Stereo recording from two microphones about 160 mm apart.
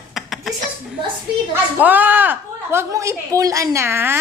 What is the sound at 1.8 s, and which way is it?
A woman's voice, 10° right (ahead or behind).